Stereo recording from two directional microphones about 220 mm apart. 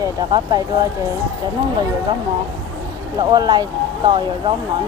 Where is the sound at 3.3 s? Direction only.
20° right (ahead or behind).